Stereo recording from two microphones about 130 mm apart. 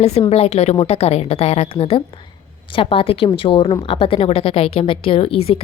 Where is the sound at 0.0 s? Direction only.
55° left (ahead or behind).